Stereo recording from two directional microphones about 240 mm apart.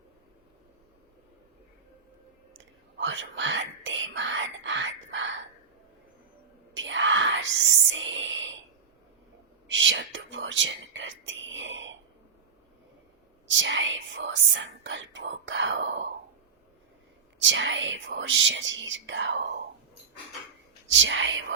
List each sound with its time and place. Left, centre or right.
3.0 s whispering: right
6.7 s whispering: right
9.6 s speech: right
13.5 s speech: right
17.4 s speech: right
20.9 s speech: right